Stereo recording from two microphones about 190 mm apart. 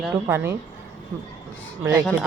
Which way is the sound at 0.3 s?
10° right (ahead or behind).